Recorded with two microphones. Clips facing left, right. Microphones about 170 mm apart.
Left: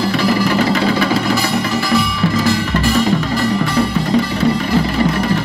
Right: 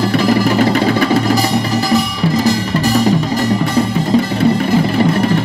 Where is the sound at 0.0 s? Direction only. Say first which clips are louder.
Right 2 dB; 50° right (ahead or behind).